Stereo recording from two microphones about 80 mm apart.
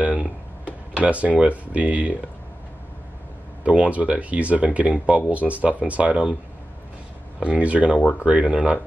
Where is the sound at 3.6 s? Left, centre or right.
Centre.